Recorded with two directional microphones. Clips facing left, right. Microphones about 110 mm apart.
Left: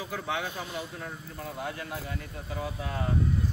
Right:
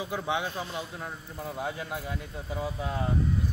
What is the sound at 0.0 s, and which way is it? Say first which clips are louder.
Speech: right 2 dB; 15° right (ahead or behind).